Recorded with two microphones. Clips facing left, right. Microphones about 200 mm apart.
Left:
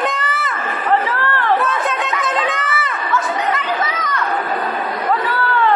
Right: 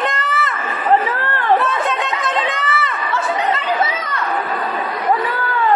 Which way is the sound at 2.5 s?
Centre (ahead or behind).